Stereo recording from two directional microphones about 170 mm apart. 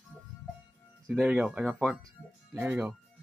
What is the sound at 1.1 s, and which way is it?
Speech, 5° right (ahead or behind).